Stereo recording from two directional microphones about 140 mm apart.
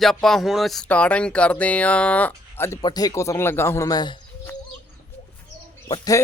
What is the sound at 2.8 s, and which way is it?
Speech, 25° left (ahead or behind).